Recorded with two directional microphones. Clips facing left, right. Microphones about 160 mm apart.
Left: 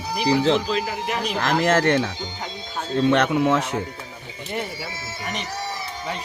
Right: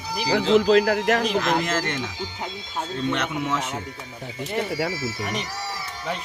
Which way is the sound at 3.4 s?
55° left (ahead or behind).